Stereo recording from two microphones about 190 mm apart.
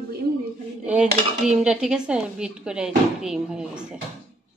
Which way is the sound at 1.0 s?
35° right (ahead or behind).